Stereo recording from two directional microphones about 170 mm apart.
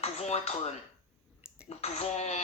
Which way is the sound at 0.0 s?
40° left (ahead or behind).